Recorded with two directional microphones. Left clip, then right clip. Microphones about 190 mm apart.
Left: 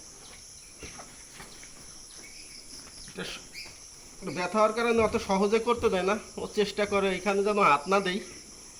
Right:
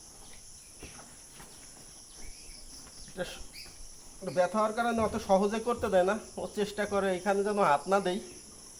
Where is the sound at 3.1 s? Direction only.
15° right (ahead or behind).